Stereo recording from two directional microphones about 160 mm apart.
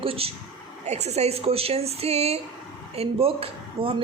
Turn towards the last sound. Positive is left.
turn(degrees=-35)  # may be behind; listen again after turning